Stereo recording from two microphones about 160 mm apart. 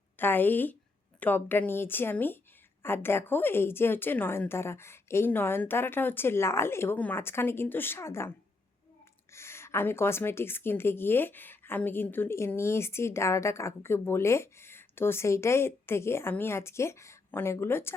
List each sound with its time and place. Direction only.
0.2 s a woman's voice: 10° left (ahead or behind)
9.3 s a woman's voice: 15° left (ahead or behind)